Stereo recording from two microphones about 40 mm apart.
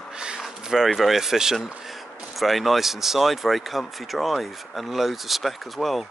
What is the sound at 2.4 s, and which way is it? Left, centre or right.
Speech, centre.